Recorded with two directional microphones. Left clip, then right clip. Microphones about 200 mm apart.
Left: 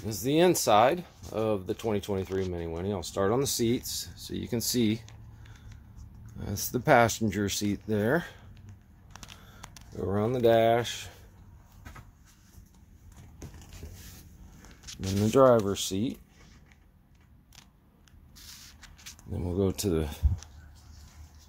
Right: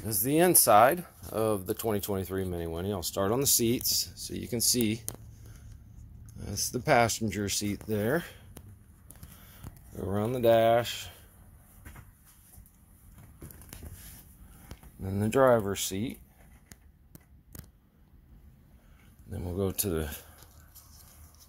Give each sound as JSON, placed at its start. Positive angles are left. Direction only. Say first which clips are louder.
{"t": 0.0, "sound": "speech", "louder": "left 1 dB", "side_deg": 0}
{"t": 6.3, "sound": "speech", "louder": "even", "side_deg": 25}
{"t": 9.9, "sound": "speech", "louder": "left 3 dB", "side_deg": 10}
{"t": 15.0, "sound": "speech", "louder": "left 3 dB", "side_deg": 10}
{"t": 19.3, "sound": "speech", "louder": "left 3 dB", "side_deg": 35}